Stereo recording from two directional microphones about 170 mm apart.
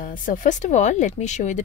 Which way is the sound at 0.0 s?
55° left (ahead or behind).